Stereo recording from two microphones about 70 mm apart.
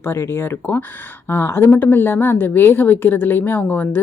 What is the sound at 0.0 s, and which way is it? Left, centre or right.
Speech, left.